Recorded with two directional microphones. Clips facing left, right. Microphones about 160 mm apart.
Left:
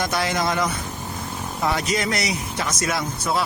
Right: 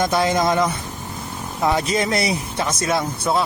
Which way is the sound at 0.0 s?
20° right (ahead or behind).